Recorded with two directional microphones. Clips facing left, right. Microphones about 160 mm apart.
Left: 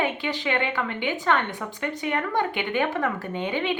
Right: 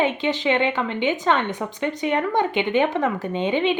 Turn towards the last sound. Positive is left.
turn(degrees=-20)  # may be behind; listen again after turning